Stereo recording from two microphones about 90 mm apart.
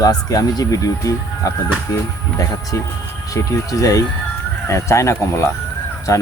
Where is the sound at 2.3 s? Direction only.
40° left (ahead or behind).